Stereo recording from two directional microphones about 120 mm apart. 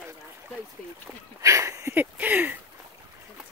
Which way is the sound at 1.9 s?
15° right (ahead or behind).